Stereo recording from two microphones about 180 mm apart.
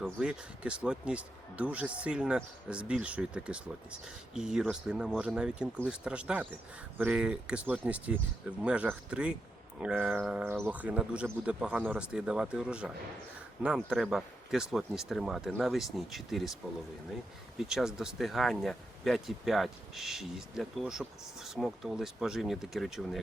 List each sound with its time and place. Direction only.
0.0 s speech: 5° right (ahead or behind)
17.6 s speech: centre (ahead or behind)